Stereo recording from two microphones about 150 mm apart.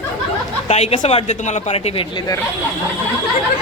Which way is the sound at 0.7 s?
45° left (ahead or behind).